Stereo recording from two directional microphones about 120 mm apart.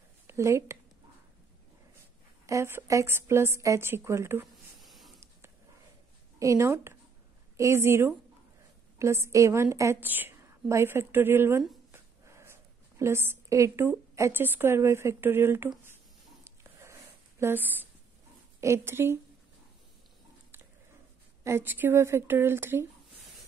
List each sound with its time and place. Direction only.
0.3 s a woman's voice: 25° right (ahead or behind)
2.4 s a woman's voice: 25° right (ahead or behind)
4.7 s a sound: centre (ahead or behind)
6.4 s a woman's voice: 25° right (ahead or behind)
16.4 s a sound: 20° right (ahead or behind)
18.6 s a woman's voice: 20° right (ahead or behind)
21.5 s a woman's voice: 20° right (ahead or behind)